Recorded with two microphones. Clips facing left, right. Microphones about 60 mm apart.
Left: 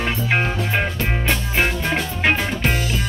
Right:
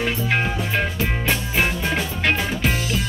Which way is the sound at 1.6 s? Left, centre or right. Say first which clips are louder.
Left 2 dB; centre.